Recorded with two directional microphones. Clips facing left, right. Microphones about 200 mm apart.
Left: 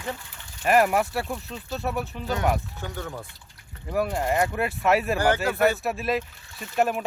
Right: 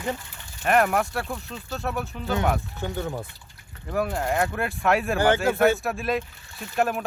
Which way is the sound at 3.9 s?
Centre (ahead or behind).